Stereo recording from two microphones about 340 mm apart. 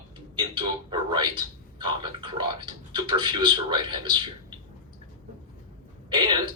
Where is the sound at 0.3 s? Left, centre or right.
Centre.